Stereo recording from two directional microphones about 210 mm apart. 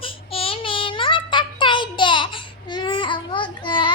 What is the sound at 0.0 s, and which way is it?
Child singing, 25° left (ahead or behind).